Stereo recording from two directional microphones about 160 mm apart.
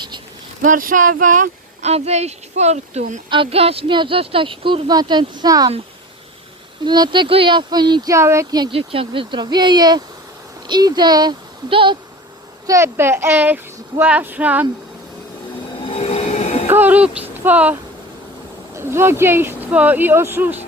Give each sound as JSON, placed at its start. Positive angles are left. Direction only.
{"t": 0.6, "sound": "speech", "side_deg": -55}
{"t": 3.2, "sound": "speech", "side_deg": -30}
{"t": 6.8, "sound": "speech", "side_deg": -25}
{"t": 12.6, "sound": "speech", "side_deg": -15}
{"t": 15.9, "sound": "train", "side_deg": 40}
{"t": 16.6, "sound": "speech", "side_deg": -10}